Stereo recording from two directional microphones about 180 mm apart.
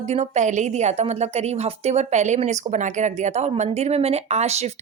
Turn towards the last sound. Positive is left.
turn(degrees=-35)  # may be behind; listen again after turning